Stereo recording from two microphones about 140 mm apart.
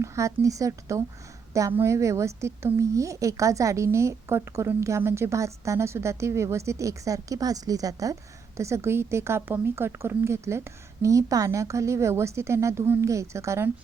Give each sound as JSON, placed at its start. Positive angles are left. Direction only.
{"t": 0.0, "sound": "a woman's voice", "side_deg": -20}